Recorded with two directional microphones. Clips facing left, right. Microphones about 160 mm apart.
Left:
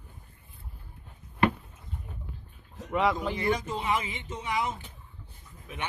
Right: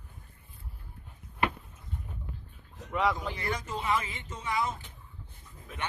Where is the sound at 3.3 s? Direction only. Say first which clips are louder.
Left 6 dB; 20° left (ahead or behind).